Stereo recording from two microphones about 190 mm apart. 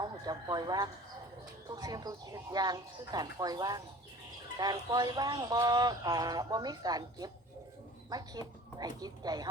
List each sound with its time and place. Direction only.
0.0 s speech: 20° right (ahead or behind)